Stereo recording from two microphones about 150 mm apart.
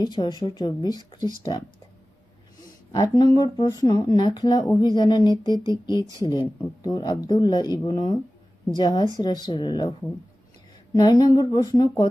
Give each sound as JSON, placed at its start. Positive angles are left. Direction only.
{"t": 0.0, "sound": "speech", "side_deg": 30}
{"t": 2.9, "sound": "speech", "side_deg": 25}
{"t": 10.9, "sound": "speech", "side_deg": 25}